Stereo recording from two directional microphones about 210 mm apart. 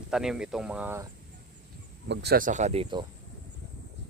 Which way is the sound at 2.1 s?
45° right (ahead or behind).